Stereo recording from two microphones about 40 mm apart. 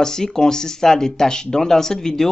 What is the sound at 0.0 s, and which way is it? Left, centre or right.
Speech, centre.